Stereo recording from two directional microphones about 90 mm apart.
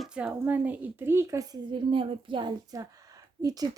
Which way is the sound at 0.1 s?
15° right (ahead or behind).